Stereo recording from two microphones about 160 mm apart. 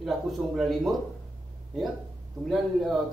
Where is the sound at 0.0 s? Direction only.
Centre (ahead or behind).